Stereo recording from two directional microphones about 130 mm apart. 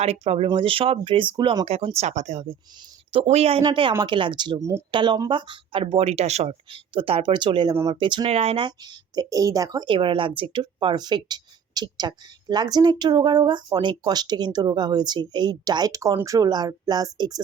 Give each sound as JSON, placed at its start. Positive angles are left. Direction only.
{"t": 0.0, "sound": "speech", "side_deg": -55}
{"t": 0.4, "sound": "speech", "side_deg": -40}
{"t": 1.6, "sound": "speech", "side_deg": -50}